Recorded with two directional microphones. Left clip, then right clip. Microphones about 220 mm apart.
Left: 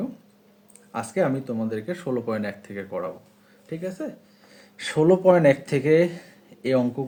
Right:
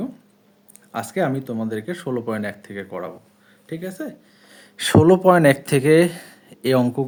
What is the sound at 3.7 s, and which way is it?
Speech, 35° right (ahead or behind).